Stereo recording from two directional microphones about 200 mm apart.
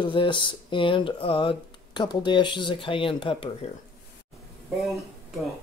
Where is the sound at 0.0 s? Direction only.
25° left (ahead or behind).